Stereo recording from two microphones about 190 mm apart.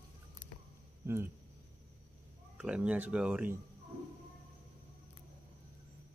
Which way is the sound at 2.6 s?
5° right (ahead or behind).